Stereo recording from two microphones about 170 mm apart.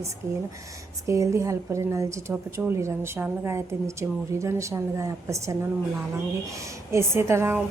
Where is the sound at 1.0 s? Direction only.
20° right (ahead or behind).